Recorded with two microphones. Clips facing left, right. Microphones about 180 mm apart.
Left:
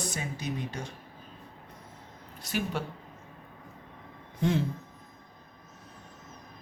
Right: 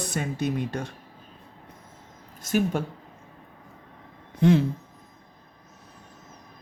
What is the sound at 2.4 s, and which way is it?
Speech, 45° right (ahead or behind).